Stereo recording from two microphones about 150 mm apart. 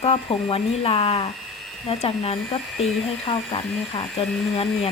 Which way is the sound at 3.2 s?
40° left (ahead or behind).